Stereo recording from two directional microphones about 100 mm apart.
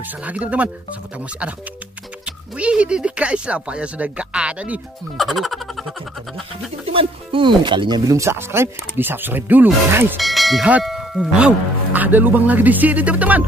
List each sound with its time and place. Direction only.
0.0 s speech: 15° right (ahead or behind)
2.2 s speech: 10° right (ahead or behind)
5.1 s speech: centre (ahead or behind)
6.9 s speech: 65° right (ahead or behind)
8.1 s speech: 30° right (ahead or behind)
10.1 s speech: centre (ahead or behind)
10.8 s a sound: centre (ahead or behind)
11.3 s speech: 15° right (ahead or behind)